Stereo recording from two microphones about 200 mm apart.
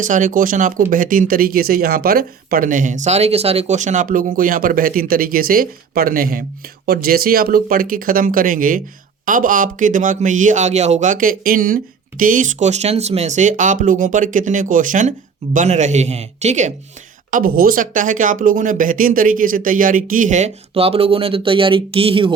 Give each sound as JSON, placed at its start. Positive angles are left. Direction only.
{"t": 0.0, "sound": "speech", "side_deg": -40}
{"t": 17.3, "sound": "speech", "side_deg": -45}